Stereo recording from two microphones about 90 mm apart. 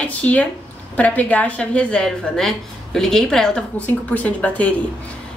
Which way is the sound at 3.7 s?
15° left (ahead or behind).